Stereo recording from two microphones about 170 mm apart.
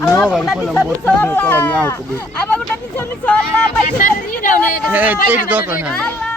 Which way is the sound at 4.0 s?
55° left (ahead or behind).